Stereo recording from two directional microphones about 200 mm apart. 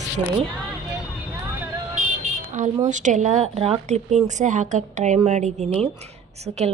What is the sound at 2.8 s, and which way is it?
Speech, 40° right (ahead or behind).